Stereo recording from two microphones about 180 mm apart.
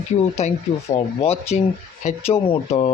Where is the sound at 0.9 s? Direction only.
35° left (ahead or behind).